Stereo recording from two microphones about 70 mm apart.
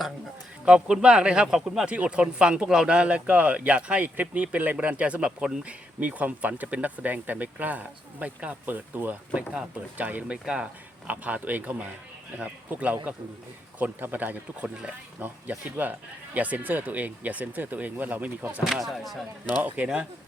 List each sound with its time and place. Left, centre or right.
0.6 s speech: centre
18.6 s speech: centre
19.6 s speech: right